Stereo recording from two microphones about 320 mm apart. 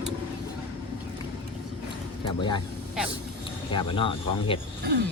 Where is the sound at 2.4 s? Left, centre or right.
Centre.